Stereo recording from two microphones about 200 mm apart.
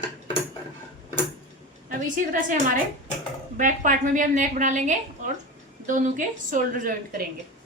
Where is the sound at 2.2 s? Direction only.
40° right (ahead or behind).